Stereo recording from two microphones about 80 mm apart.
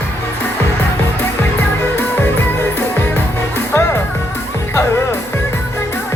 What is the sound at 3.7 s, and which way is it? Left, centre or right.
Music, left.